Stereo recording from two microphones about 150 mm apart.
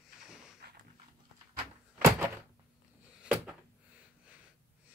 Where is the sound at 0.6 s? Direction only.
90° right.